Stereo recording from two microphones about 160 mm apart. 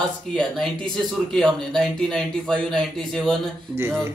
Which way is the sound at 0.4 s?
5° left (ahead or behind).